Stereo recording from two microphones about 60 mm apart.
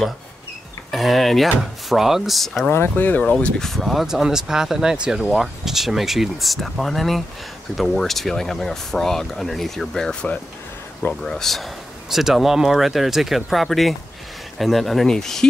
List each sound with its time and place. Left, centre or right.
0.9 s speech: centre
2.7 s speech: left
3.2 s speech: left
11.2 s speech: centre